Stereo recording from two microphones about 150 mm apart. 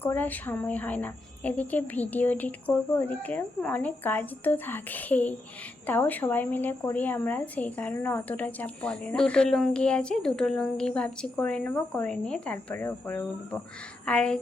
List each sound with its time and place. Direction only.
0.0 s a woman's voice: 15° left (ahead or behind)